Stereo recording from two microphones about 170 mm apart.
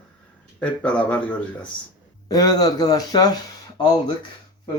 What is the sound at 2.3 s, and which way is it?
Speech, 20° left (ahead or behind).